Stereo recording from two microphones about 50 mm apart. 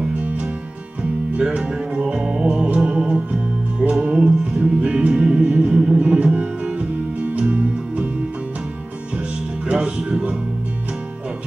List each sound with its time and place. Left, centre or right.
0.1 s music: right
9.7 s music: centre